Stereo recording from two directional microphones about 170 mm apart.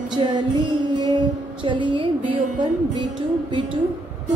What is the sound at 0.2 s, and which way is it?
Speech, 30° right (ahead or behind).